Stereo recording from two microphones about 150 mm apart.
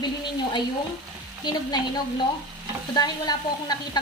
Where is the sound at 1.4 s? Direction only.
30° left (ahead or behind).